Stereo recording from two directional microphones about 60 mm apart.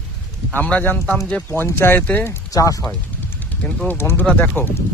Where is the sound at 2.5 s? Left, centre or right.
Left.